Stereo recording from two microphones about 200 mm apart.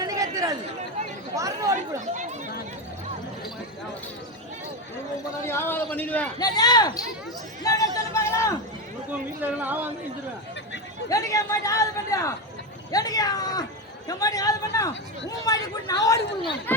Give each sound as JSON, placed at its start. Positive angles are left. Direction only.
{"t": 0.0, "sound": "chatter", "side_deg": -15}
{"t": 1.4, "sound": "speech", "side_deg": -15}
{"t": 5.5, "sound": "a man's voice", "side_deg": 10}
{"t": 6.4, "sound": "speech", "side_deg": 20}
{"t": 7.6, "sound": "a sound", "side_deg": 15}
{"t": 9.4, "sound": "speech", "side_deg": -10}
{"t": 11.1, "sound": "a man's voice", "side_deg": 15}